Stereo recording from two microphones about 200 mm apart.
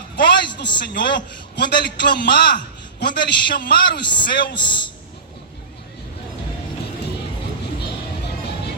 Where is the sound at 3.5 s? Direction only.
45° left (ahead or behind).